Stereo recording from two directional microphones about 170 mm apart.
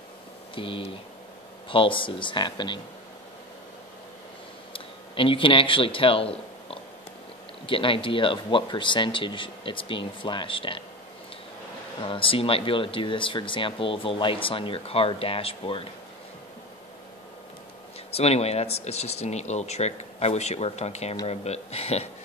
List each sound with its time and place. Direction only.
0.6 s speech: 30° left (ahead or behind)
4.7 s speech: 30° left (ahead or behind)
12.0 s speech: 30° left (ahead or behind)
18.1 s speech: 40° left (ahead or behind)